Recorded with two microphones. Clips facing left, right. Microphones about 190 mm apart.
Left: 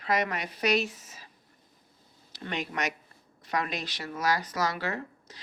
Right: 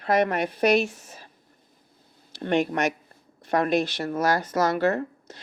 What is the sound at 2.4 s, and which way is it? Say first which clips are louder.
Speech: right 10 dB; 60° right (ahead or behind).